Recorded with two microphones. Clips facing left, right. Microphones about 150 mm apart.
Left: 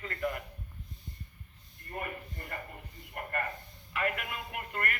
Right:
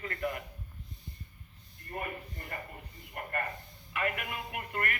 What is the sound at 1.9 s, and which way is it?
Speech, 20° right (ahead or behind).